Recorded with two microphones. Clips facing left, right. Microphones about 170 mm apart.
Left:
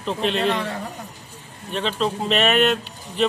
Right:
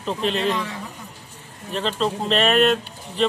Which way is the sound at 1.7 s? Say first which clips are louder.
Even; centre (ahead or behind).